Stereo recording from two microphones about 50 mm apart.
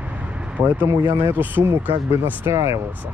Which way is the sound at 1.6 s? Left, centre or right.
Right.